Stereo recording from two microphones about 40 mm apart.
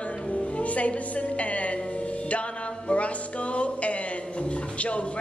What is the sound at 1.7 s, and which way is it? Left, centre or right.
Music, left.